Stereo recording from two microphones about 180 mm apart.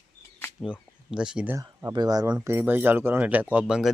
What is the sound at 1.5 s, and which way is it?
Speech, 15° right (ahead or behind).